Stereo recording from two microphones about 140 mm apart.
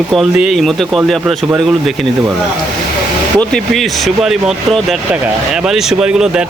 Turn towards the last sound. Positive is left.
turn(degrees=-5)  # may be behind; listen again after turning